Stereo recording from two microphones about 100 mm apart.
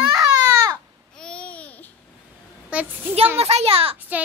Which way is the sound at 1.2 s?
10° left (ahead or behind).